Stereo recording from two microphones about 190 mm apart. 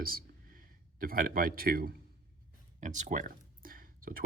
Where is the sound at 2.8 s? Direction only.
40° right (ahead or behind).